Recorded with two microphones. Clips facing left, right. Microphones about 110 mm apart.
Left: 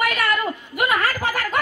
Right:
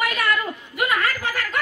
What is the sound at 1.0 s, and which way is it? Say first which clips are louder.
Snicker: left 2 dB; 35° left (ahead or behind).